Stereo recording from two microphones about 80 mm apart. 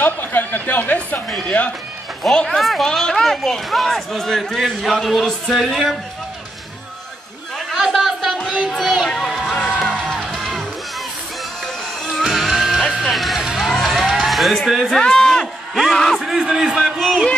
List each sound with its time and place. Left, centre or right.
0.0 s a sound: left
1.5 s speech: centre
2.2 s speech: centre
7.5 s a sound: centre
9.8 s music: centre
10.3 s music: centre
11.6 s music: centre
15.0 s a sound: centre
16.3 s speech: centre